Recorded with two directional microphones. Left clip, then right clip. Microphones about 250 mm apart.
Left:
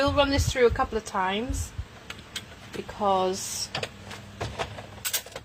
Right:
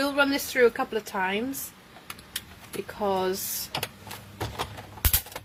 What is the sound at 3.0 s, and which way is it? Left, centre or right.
Speech, centre.